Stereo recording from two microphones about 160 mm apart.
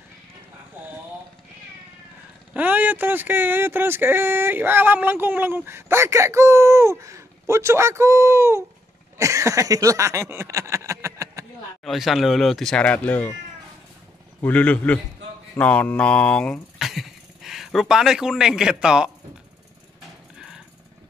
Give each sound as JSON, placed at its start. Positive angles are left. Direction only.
{"t": 2.5, "sound": "speech", "side_deg": -10}
{"t": 9.2, "sound": "a sound", "side_deg": -20}
{"t": 11.8, "sound": "speech", "side_deg": 0}
{"t": 14.4, "sound": "a man's voice", "side_deg": 10}
{"t": 20.3, "sound": "jackhammer", "side_deg": -5}